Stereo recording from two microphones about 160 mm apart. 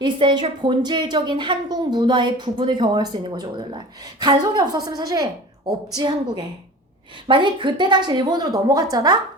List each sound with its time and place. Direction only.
0.0 s a woman's voice: 30° right (ahead or behind)